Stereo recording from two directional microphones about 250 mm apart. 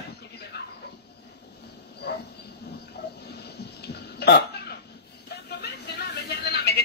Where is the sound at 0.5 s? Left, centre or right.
Left.